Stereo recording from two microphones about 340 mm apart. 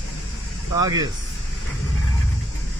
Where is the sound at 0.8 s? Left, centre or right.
Centre.